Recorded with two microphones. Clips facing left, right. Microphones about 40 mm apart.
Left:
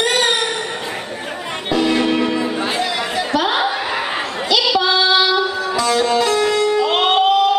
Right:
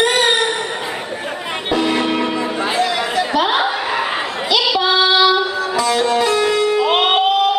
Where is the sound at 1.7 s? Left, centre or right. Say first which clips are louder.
Left 1 dB; centre.